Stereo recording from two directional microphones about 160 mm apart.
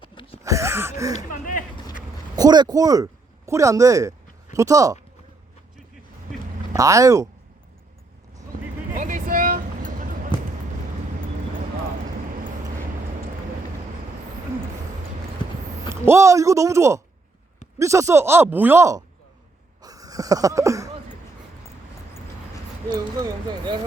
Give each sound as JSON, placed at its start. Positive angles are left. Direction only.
{"t": 0.0, "sound": "a sound", "side_deg": 35}
{"t": 0.4, "sound": "a sound", "side_deg": -20}
{"t": 1.1, "sound": "speech", "side_deg": 55}
{"t": 2.3, "sound": "speech", "side_deg": -25}
{"t": 6.7, "sound": "speech", "side_deg": -20}
{"t": 9.0, "sound": "vehicle", "side_deg": -55}
{"t": 16.0, "sound": "speech", "side_deg": -20}
{"t": 19.8, "sound": "a sound", "side_deg": -25}
{"t": 22.9, "sound": "speech", "side_deg": -25}